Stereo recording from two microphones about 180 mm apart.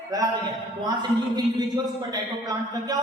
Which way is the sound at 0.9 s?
25° right (ahead or behind).